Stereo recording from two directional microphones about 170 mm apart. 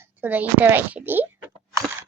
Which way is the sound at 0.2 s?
10° right (ahead or behind).